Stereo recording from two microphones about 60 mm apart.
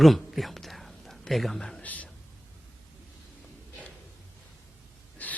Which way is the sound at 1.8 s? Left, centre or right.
Left.